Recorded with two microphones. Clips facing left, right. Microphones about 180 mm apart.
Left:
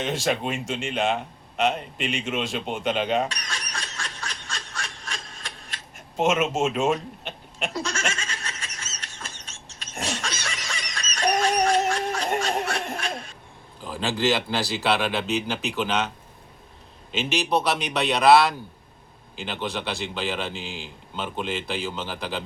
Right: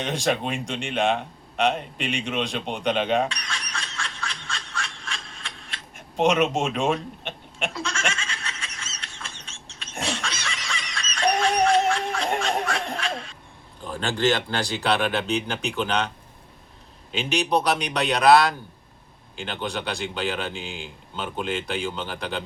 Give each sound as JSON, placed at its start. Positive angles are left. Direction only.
{"t": 0.0, "sound": "speech", "side_deg": 5}
{"t": 3.2, "sound": "a sound", "side_deg": 40}
{"t": 6.1, "sound": "speech", "side_deg": 0}
{"t": 7.7, "sound": "goat", "side_deg": 40}
{"t": 10.0, "sound": "laughter", "side_deg": 40}
{"t": 13.8, "sound": "speech", "side_deg": 5}
{"t": 17.1, "sound": "speech", "side_deg": 0}